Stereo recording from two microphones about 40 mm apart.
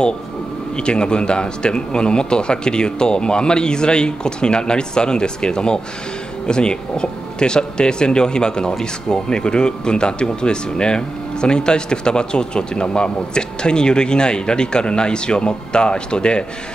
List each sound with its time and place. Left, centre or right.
0.7 s speech: left